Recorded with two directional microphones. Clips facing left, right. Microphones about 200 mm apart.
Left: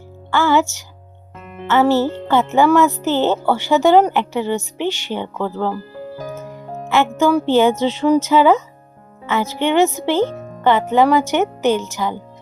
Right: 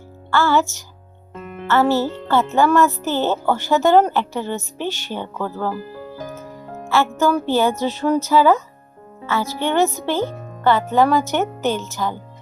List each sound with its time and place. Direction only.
0.3 s speech: 15° left (ahead or behind)
6.8 s speech: 20° left (ahead or behind)